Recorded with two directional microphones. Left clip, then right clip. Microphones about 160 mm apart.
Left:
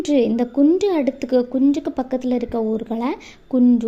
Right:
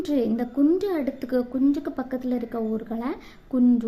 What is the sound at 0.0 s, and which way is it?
A woman's voice, 25° left (ahead or behind).